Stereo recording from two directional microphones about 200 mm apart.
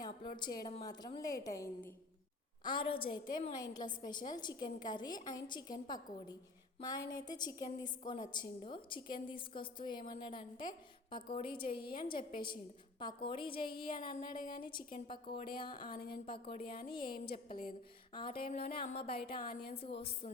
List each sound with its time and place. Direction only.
0.0 s a sound: 20° left (ahead or behind)
0.6 s a woman's voice: 20° left (ahead or behind)
15.9 s a woman's voice: 50° left (ahead or behind)
16.2 s a woman's voice: 25° left (ahead or behind)
16.6 s a woman's voice: 50° left (ahead or behind)
18.1 s a woman's voice: 25° left (ahead or behind)